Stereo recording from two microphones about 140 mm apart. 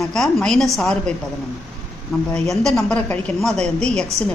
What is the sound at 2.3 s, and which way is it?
A woman's voice, 5° left (ahead or behind).